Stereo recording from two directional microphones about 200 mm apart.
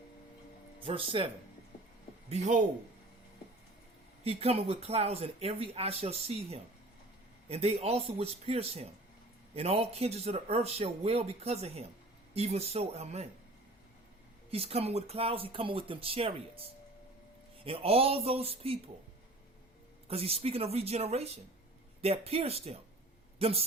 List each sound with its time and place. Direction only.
0.9 s speech: 25° right (ahead or behind)
2.3 s speech: 35° right (ahead or behind)
4.2 s speech: 30° right (ahead or behind)
14.5 s speech: 30° right (ahead or behind)
17.7 s speech: 30° right (ahead or behind)
20.1 s a man's voice: 30° right (ahead or behind)